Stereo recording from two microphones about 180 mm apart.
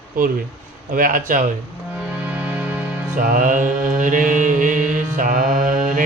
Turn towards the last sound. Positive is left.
turn(degrees=-45)  # may be behind; listen again after turning